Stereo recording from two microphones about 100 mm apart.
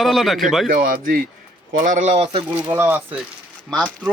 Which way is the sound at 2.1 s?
90° right.